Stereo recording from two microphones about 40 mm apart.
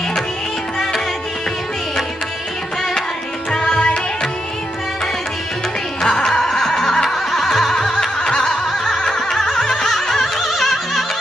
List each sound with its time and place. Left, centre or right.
3.6 s music: left
6.0 s music: centre
7.9 s a sound: centre
8.7 s music: centre